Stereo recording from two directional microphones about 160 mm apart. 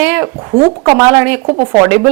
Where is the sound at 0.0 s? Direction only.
10° right (ahead or behind).